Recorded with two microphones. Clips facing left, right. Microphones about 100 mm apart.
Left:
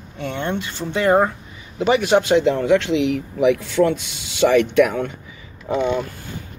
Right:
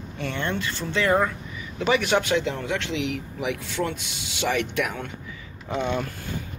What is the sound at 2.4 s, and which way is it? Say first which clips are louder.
Speech: left 11 dB; 60° left (ahead or behind).